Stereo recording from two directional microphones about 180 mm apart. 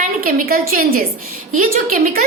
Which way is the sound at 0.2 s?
50° right (ahead or behind).